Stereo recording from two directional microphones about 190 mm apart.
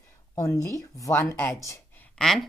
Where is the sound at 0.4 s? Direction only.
15° left (ahead or behind).